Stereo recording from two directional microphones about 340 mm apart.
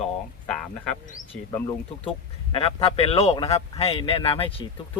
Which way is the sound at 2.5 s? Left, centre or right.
Centre.